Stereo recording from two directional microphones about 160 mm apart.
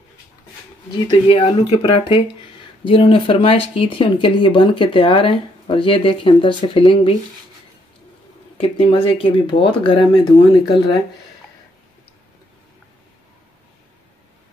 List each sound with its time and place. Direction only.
0.9 s speech: 30° left (ahead or behind)
8.5 s speech: 35° left (ahead or behind)